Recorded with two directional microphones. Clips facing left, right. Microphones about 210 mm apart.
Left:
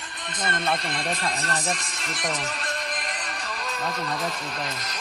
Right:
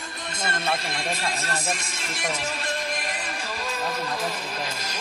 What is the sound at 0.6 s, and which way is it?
Speech, 5° right (ahead or behind).